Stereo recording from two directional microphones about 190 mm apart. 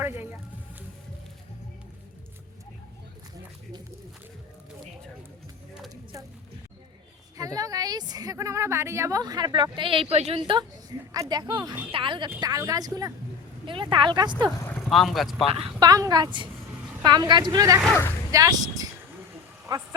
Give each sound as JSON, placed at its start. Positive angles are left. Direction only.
{"t": 0.0, "sound": "music", "side_deg": -10}
{"t": 5.9, "sound": "a sound", "side_deg": -20}
{"t": 7.3, "sound": "a woman's voice", "side_deg": -20}
{"t": 14.4, "sound": "speech", "side_deg": 0}
{"t": 15.4, "sound": "a woman's voice", "side_deg": -30}
{"t": 17.8, "sound": "speech", "side_deg": 10}
{"t": 18.3, "sound": "speech", "side_deg": -20}
{"t": 19.6, "sound": "a sound", "side_deg": -20}